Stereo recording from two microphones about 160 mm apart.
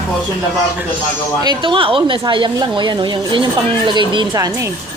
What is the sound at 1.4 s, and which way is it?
A woman's voice, 30° right (ahead or behind).